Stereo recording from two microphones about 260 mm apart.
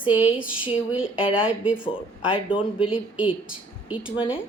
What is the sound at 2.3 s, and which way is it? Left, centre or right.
Speech, centre.